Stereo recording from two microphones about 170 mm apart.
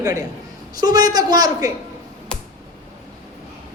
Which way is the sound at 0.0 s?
20° right (ahead or behind).